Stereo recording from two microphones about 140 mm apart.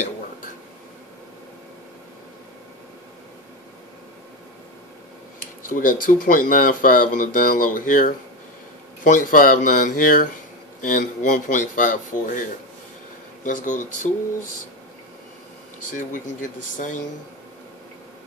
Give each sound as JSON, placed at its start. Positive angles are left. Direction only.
{"t": 5.7, "sound": "speech", "side_deg": 75}
{"t": 15.8, "sound": "speech", "side_deg": 65}